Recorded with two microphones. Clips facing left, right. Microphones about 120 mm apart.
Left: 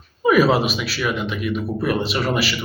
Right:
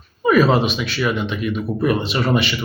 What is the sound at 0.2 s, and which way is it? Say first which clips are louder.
Speech: right 1 dB; 10° left (ahead or behind).